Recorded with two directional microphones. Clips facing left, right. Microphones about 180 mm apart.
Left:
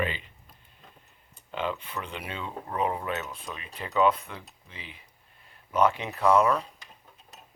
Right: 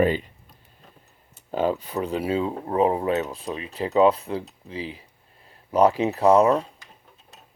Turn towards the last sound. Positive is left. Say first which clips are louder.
# right 6 dB
turn(degrees=-35)  # may be behind; listen again after turning